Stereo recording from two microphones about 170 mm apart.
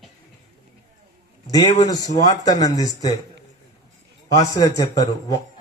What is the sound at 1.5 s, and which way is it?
A man's voice, 25° left (ahead or behind).